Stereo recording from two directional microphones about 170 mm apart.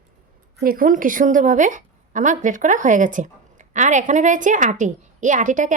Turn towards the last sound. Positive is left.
turn(degrees=-50)  # may be behind; listen again after turning